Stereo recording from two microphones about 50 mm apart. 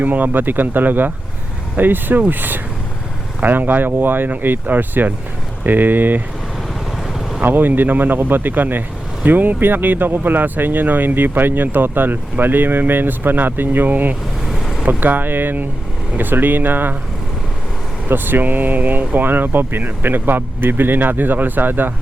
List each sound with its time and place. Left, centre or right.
0.0 s speech: right
7.4 s speech: right
14.4 s vehicle: centre
14.8 s speech: right
18.1 s speech: right